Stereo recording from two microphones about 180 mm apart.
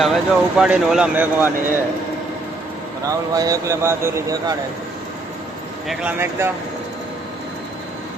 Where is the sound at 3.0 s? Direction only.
20° right (ahead or behind).